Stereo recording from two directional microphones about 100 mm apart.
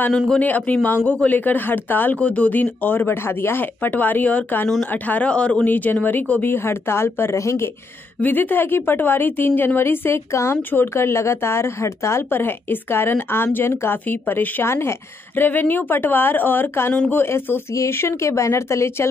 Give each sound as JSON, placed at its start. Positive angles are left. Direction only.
{"t": 0.3, "sound": "a woman's voice", "side_deg": 15}
{"t": 16.9, "sound": "speech", "side_deg": 10}
{"t": 17.2, "sound": "a woman's voice", "side_deg": 25}